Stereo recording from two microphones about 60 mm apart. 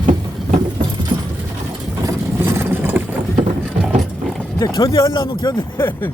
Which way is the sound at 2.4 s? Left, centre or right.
Right.